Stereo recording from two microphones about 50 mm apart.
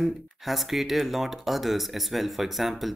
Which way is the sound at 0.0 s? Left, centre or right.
Centre.